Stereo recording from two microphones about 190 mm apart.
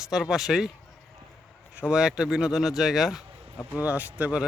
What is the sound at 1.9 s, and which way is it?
Speech, 5° right (ahead or behind).